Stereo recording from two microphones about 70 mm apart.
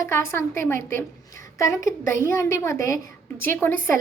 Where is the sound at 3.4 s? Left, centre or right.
Left.